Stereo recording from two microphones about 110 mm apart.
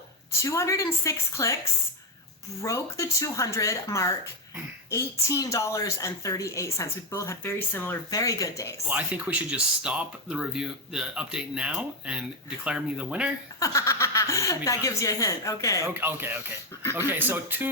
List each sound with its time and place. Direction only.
0.4 s a woman's voice: 30° left (ahead or behind)
2.6 s a woman's voice: 25° left (ahead or behind)
8.1 s speech: 30° left (ahead or behind)
8.9 s speech: 15° right (ahead or behind)
13.6 s speech: 25° left (ahead or behind)
16.0 s speech: 20° right (ahead or behind)